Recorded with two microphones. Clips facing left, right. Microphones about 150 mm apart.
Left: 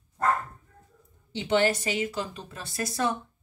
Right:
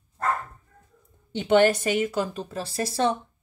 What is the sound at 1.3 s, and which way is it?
A woman's voice, 55° right (ahead or behind).